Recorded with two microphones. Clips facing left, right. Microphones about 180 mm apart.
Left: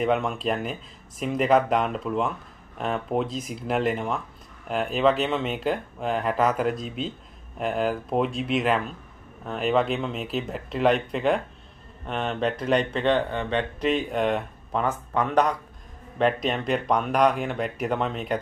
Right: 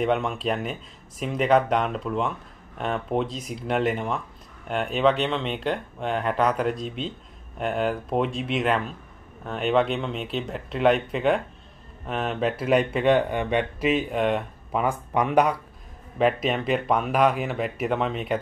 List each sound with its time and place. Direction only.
0.0 s speech: centre (ahead or behind)